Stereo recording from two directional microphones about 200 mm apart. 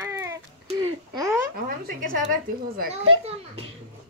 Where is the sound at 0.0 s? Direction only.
15° right (ahead or behind).